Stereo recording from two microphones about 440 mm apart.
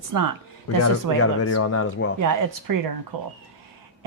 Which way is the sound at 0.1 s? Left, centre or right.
Right.